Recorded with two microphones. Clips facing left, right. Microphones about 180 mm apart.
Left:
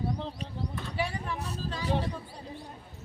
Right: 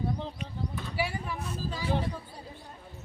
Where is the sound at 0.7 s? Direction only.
5° right (ahead or behind).